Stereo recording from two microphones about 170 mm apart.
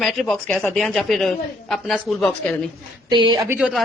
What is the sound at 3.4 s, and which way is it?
Speech, 10° right (ahead or behind).